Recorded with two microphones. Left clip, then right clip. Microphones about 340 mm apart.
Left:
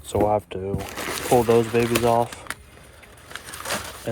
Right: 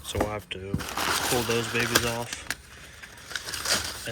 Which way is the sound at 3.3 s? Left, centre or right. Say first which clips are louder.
Right 2 dB; left.